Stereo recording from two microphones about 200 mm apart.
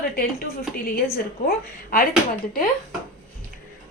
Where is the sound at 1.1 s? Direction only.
45° left (ahead or behind).